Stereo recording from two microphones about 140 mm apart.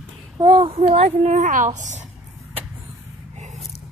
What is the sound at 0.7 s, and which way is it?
A woman's voice, 50° right (ahead or behind).